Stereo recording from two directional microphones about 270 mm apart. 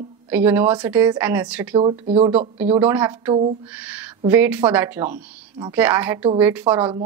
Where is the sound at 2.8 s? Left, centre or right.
Centre.